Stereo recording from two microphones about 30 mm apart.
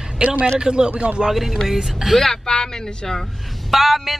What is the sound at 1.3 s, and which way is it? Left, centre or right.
Speech, centre.